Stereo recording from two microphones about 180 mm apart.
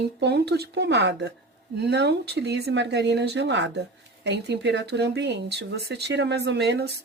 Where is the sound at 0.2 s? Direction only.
70° right (ahead or behind).